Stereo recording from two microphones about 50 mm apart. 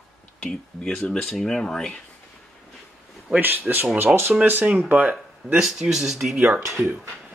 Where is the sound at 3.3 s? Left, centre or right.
Right.